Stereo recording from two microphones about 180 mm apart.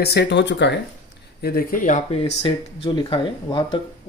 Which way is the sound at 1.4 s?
60° left (ahead or behind).